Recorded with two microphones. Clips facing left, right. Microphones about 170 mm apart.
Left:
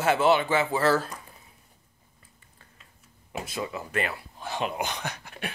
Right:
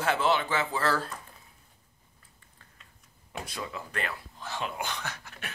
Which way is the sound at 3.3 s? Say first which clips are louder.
Left 4 dB; 5° left (ahead or behind).